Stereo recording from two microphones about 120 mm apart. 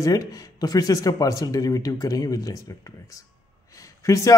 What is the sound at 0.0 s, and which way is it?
A man's voice, 30° left (ahead or behind).